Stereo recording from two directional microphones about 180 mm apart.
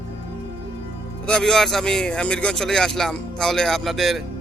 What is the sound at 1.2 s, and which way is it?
Speech, 5° left (ahead or behind).